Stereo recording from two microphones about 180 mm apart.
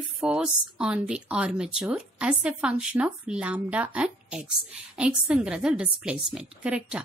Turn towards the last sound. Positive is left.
turn(degrees=-5)  # may be behind; listen again after turning